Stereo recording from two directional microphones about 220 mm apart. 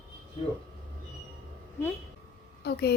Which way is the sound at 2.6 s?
50° left (ahead or behind).